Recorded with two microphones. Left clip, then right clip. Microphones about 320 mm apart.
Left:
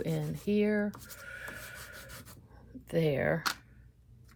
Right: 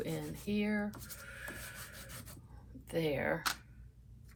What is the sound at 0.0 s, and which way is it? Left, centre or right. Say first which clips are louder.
Speech: left 5 dB; left.